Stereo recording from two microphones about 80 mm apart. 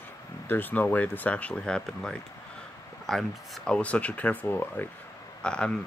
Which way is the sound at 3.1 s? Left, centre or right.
Centre.